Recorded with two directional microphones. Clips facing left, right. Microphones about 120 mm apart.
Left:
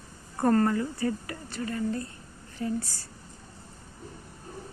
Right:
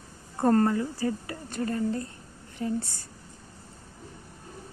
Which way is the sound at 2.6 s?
20° right (ahead or behind).